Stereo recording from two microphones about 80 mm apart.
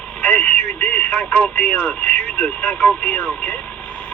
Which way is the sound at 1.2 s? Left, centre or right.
Left.